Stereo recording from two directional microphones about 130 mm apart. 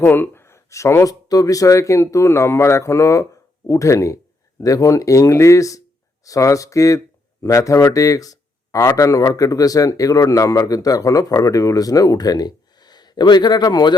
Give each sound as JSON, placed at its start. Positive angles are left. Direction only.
{"t": 0.0, "sound": "speech", "side_deg": 15}